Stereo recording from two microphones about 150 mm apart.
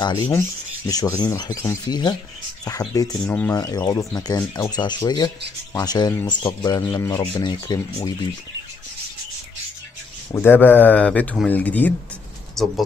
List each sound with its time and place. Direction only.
0.0 s rub: 30° left (ahead or behind)
10.3 s speech: 15° left (ahead or behind)